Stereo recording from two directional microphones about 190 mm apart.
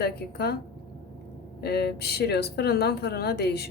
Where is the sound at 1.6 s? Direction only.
55° left (ahead or behind).